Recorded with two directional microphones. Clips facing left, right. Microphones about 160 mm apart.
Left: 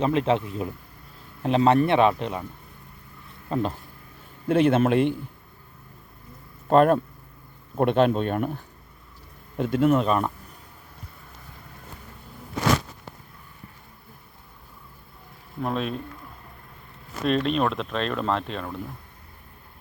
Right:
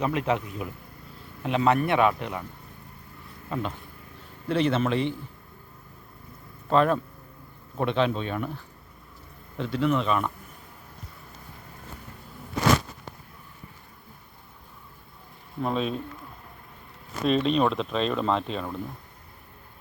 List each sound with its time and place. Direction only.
0.0 s speech: 25° left (ahead or behind)
3.5 s speech: 35° left (ahead or behind)
4.4 s speech: 50° left (ahead or behind)
6.7 s speech: 50° left (ahead or behind)
15.6 s speech: centre (ahead or behind)
17.2 s speech: centre (ahead or behind)